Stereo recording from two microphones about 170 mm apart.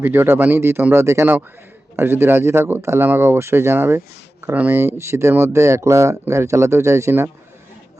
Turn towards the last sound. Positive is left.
turn(degrees=-15)  # may be behind; listen again after turning